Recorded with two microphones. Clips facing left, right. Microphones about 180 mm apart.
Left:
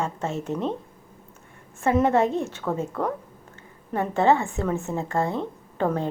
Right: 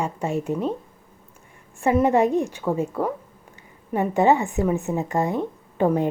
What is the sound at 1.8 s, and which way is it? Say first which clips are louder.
A woman's voice: right 2 dB; 10° right (ahead or behind).